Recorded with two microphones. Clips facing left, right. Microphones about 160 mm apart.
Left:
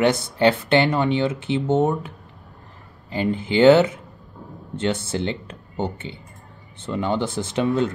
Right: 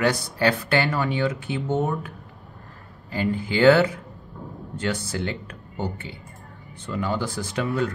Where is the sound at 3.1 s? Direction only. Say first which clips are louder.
Left 3 dB; 20° left (ahead or behind).